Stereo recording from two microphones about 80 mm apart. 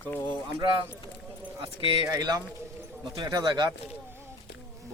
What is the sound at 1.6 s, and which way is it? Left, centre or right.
Speech, right.